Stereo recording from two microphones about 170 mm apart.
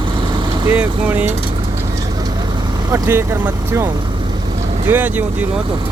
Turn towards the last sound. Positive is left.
turn(degrees=-10)  # may be behind; listen again after turning